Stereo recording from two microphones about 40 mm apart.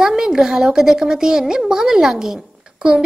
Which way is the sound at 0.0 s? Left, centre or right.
Centre.